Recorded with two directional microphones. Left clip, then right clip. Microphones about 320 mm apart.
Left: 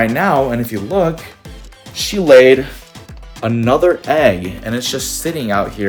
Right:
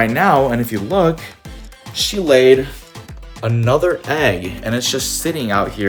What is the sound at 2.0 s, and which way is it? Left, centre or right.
Speech, centre.